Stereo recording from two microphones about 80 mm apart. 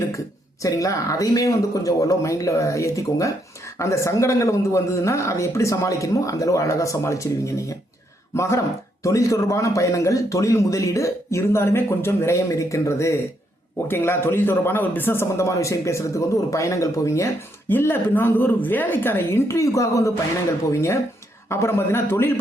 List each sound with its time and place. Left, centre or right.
0.6 s a man's voice: left
17.7 s speech: left
21.5 s a man's voice: left